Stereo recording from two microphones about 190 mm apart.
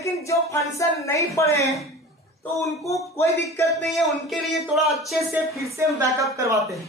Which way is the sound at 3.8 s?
Centre (ahead or behind).